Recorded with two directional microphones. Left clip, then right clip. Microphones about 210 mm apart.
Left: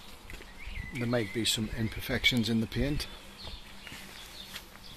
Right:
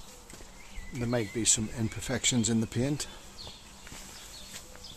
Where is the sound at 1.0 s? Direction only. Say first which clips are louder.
Even; 5° right (ahead or behind).